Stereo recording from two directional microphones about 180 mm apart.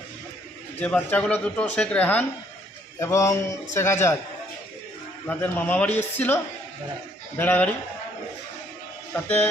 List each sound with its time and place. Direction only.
0.8 s a man's voice: 10° left (ahead or behind)
5.3 s a man's voice: 10° left (ahead or behind)